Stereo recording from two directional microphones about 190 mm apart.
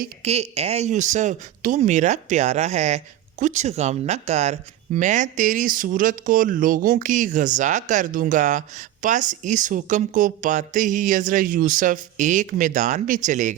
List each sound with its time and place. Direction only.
0.3 s speech: 35° right (ahead or behind)